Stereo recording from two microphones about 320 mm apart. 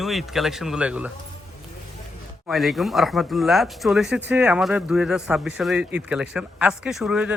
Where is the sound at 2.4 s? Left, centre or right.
Centre.